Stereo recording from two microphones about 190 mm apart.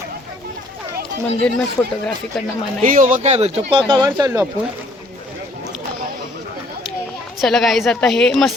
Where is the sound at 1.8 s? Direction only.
5° left (ahead or behind).